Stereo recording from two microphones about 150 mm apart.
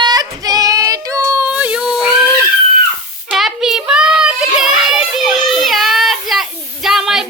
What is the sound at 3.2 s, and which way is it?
Child singing, centre (ahead or behind).